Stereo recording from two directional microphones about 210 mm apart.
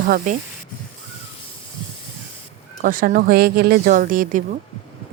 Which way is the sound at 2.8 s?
40° right (ahead or behind).